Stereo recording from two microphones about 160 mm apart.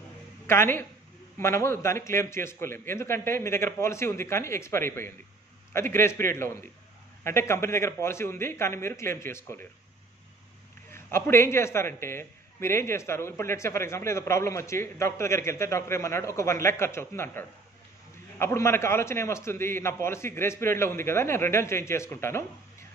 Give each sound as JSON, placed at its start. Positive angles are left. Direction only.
{"t": 0.5, "sound": "a man's voice", "side_deg": 15}
{"t": 10.9, "sound": "a man's voice", "side_deg": 15}